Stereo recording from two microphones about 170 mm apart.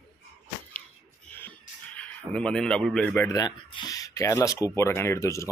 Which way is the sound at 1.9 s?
5° left (ahead or behind).